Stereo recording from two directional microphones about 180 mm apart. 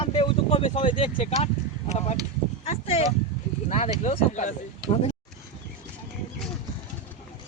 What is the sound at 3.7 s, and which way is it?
Speech, 35° left (ahead or behind).